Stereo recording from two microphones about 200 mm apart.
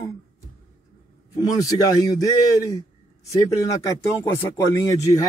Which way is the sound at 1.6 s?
15° left (ahead or behind).